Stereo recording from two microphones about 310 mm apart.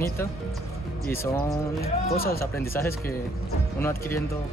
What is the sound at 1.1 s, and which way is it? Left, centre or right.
Speech, centre.